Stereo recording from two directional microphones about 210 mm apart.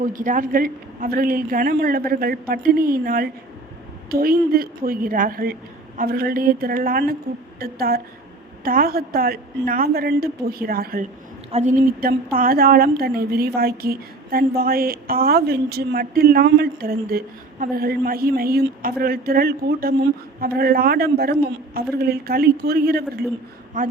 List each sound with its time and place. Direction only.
0.0 s a woman's voice: 40° right (ahead or behind)
23.8 s a woman's voice: 40° right (ahead or behind)